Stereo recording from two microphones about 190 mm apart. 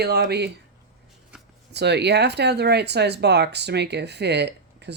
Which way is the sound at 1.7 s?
60° right (ahead or behind).